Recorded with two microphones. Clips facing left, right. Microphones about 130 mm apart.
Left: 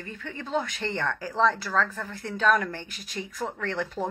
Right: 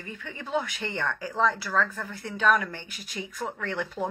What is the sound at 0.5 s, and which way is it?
Speech, 40° left (ahead or behind).